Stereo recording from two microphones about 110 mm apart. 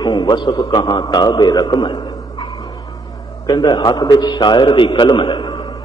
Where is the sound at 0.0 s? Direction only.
40° left (ahead or behind).